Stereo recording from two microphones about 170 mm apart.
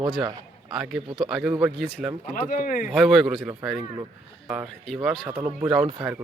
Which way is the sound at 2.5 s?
55° left (ahead or behind).